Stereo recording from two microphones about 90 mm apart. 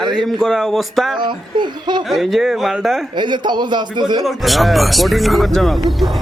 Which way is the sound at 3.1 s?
60° right (ahead or behind).